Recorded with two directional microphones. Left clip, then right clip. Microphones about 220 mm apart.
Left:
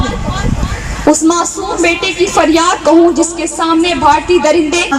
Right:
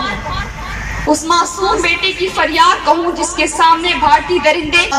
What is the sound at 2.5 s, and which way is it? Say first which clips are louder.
Music: left 1 dB; 60° left (ahead or behind).